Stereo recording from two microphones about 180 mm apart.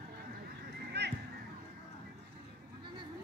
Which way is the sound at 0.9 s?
70° right (ahead or behind).